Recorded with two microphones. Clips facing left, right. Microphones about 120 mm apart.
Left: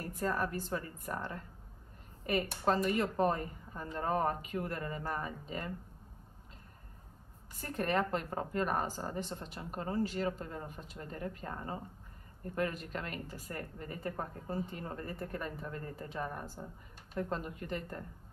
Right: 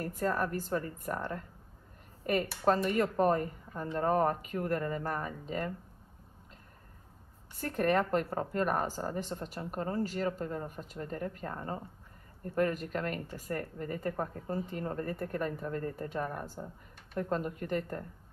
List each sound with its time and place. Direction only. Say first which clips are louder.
0.0 s a woman's voice: right 3 dB; 45° right (ahead or behind)
2.6 s a woman's voice: right 3 dB; 45° right (ahead or behind)
7.5 s a woman's voice: right 4 dB; 50° right (ahead or behind)